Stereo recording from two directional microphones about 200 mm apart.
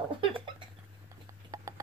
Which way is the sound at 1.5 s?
20° right (ahead or behind).